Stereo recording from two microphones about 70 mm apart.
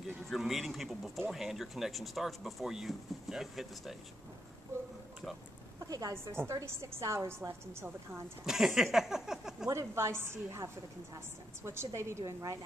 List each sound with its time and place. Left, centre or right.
0.3 s speech: centre
5.9 s a woman's voice: right
6.3 s a woman's voice: right
8.5 s speech: centre
9.7 s a woman's voice: right